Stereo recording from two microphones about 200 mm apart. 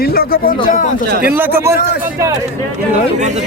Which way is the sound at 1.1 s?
50° right (ahead or behind).